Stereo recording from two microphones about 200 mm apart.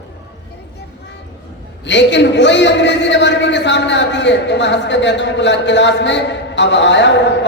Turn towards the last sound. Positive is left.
turn(degrees=60)  # may be behind; listen again after turning